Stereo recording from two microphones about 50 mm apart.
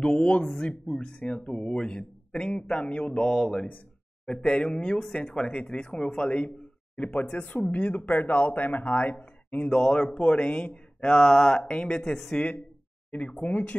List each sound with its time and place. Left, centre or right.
0.0 s a man's voice: centre
5.0 s a man's voice: centre; by 9.7 s left
9.7 s a man's voice: centre